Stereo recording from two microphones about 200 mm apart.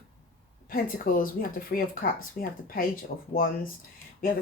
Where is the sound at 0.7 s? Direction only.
45° left (ahead or behind).